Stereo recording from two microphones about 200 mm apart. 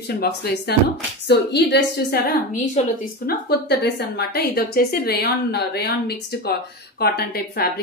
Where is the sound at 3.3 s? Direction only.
55° left (ahead or behind).